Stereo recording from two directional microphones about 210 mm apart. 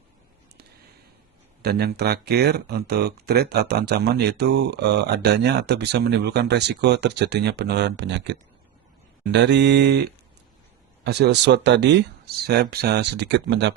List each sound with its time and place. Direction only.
1.6 s speech: 50° right (ahead or behind)